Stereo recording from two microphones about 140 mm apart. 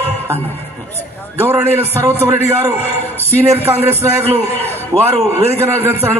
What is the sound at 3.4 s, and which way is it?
Speech, 20° right (ahead or behind).